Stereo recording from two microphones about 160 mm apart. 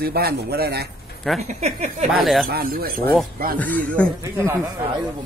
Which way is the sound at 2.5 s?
70° right (ahead or behind).